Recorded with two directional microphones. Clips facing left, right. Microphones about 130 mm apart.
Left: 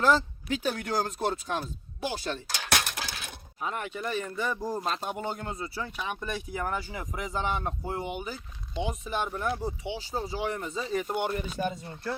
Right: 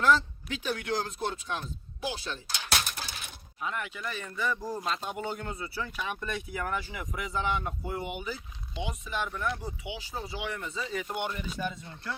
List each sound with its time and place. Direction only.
0.6 s speech: 40° left (ahead or behind)
2.6 s a sound: 70° left (ahead or behind)
3.6 s speech: 40° left (ahead or behind); by 6.3 s 20° left (ahead or behind)
6.5 s speech: 35° left (ahead or behind)